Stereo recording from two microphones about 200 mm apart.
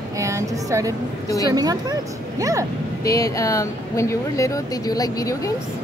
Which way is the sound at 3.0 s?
15° left (ahead or behind).